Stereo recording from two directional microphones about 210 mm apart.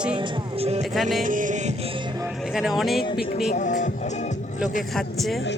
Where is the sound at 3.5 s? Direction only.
35° left (ahead or behind).